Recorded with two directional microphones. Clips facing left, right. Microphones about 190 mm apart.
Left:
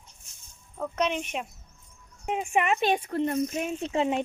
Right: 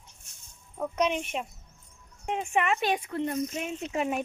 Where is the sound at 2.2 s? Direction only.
5° left (ahead or behind); by 3.1 s 25° left (ahead or behind).